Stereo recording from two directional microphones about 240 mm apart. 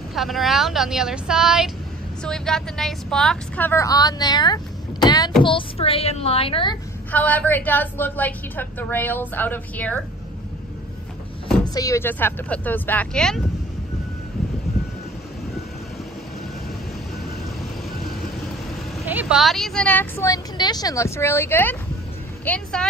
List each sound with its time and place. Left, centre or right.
0.1 s a woman's voice: centre; by 6.8 s left
7.1 s a woman's voice: centre
11.6 s a woman's voice: centre
19.0 s a woman's voice: centre